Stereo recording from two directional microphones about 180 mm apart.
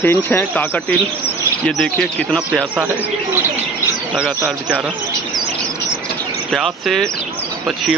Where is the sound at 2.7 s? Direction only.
10° right (ahead or behind).